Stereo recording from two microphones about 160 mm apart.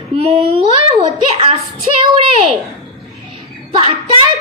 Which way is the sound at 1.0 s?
35° right (ahead or behind).